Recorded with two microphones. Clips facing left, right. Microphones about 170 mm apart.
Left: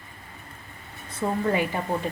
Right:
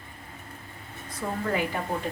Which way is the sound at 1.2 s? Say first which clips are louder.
Left 5 dB; 20° left (ahead or behind).